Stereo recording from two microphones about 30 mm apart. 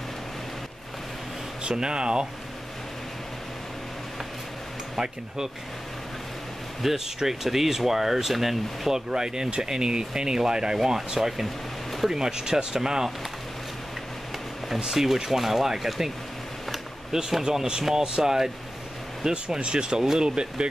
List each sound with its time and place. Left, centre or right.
1.7 s speech: right
6.8 s speech: centre
9.1 s speech: right
11.1 s speech: centre
14.9 s speech: centre
17.1 s speech: centre